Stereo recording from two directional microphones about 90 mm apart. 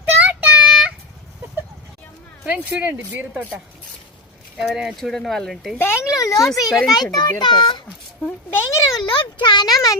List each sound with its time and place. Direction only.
0.0 s child singing: 15° right (ahead or behind)
2.5 s speech: 15° right (ahead or behind)
4.5 s speech: 5° right (ahead or behind)
5.8 s a child's voice: 25° left (ahead or behind)
6.7 s speech: centre (ahead or behind)
6.9 s a child's voice: 50° left (ahead or behind)
8.5 s a sound: 35° left (ahead or behind)
9.0 s speech: 60° left (ahead or behind)